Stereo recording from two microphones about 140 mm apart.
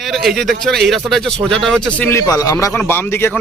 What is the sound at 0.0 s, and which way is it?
A man's voice, centre (ahead or behind).